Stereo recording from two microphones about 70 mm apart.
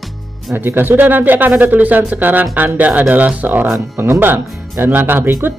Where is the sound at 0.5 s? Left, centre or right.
Right.